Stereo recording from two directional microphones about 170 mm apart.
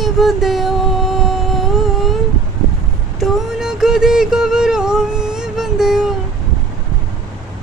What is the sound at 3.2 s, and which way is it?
Music, 5° right (ahead or behind).